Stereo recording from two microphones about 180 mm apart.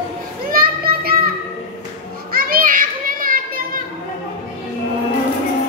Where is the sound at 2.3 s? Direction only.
55° right (ahead or behind).